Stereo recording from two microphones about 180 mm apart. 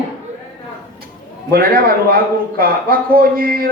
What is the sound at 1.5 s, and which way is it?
A man's voice, 55° right (ahead or behind).